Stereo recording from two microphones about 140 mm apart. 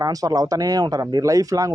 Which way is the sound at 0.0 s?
25° right (ahead or behind).